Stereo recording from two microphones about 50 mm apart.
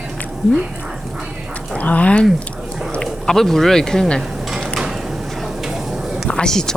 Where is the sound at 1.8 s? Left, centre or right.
Left.